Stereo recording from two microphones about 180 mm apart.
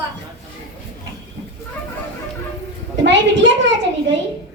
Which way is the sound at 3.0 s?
90° right.